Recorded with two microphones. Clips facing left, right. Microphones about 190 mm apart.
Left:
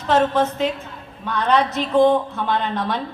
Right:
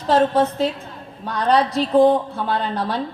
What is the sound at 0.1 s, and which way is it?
A woman's voice, 35° right (ahead or behind).